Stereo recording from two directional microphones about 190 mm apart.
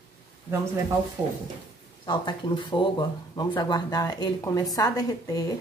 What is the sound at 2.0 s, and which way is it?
Speech, 25° left (ahead or behind).